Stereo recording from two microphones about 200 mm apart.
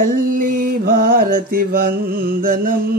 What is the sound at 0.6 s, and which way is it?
Mantra, 45° right (ahead or behind).